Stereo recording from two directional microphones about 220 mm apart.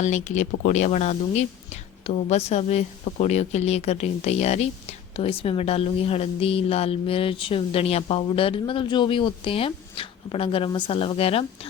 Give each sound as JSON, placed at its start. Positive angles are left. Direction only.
{"t": 0.0, "sound": "speech", "side_deg": 30}